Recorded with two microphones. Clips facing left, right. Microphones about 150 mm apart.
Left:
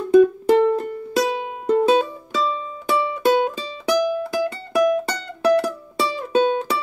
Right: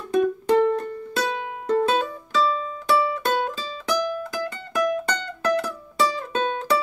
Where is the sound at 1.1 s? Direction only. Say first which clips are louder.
Left 6 dB; 20° left (ahead or behind).